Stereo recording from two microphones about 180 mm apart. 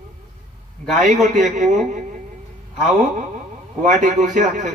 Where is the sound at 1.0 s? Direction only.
45° right (ahead or behind).